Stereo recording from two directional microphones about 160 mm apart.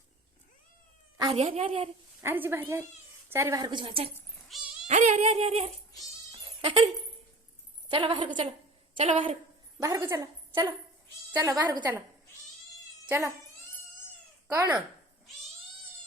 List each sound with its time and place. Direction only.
1.3 s a sound: 40° right (ahead or behind)
2.2 s a woman's voice: 15° right (ahead or behind); by 4.1 s 35° right (ahead or behind)
4.4 s cat: centre (ahead or behind)
4.9 s a sound: 45° right (ahead or behind)
7.9 s a woman's voice: 35° right (ahead or behind)
9.8 s a woman's voice: 20° right (ahead or behind)
13.1 s speech: 15° right (ahead or behind)
14.5 s a woman's voice: 20° right (ahead or behind)